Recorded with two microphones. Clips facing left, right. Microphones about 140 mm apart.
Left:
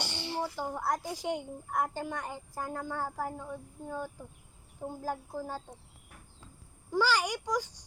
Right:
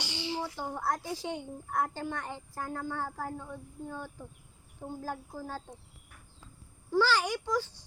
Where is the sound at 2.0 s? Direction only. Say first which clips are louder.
Even; 10° left (ahead or behind).